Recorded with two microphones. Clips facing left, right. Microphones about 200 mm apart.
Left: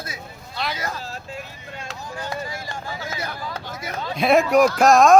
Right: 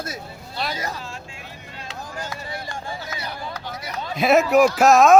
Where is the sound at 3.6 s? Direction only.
50° left (ahead or behind).